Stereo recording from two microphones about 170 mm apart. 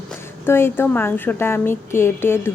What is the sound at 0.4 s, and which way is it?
A woman's voice, 15° left (ahead or behind).